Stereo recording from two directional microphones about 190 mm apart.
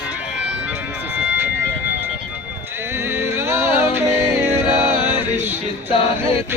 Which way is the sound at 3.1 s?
15° right (ahead or behind).